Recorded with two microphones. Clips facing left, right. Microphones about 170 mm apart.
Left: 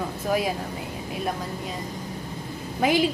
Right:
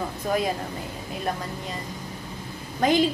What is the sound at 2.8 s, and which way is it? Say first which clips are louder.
Speech: right 1 dB; 5° left (ahead or behind).